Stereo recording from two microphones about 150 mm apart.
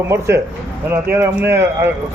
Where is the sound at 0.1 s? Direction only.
20° right (ahead or behind).